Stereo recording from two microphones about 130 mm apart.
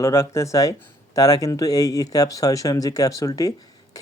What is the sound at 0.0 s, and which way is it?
Speech, 25° left (ahead or behind).